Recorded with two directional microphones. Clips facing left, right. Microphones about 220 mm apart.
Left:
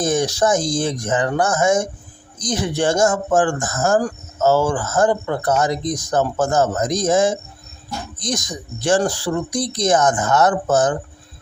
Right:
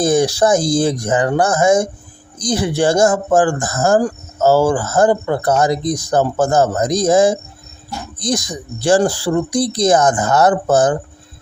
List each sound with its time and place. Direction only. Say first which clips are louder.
0.0 s speech: right 4 dB; 30° right (ahead or behind)